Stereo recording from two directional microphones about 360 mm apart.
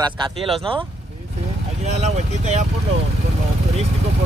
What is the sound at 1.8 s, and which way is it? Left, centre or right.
Vehicle, centre.